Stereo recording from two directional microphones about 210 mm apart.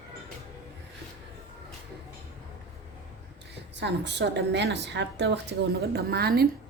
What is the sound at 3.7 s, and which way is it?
A woman's voice, 55° right (ahead or behind).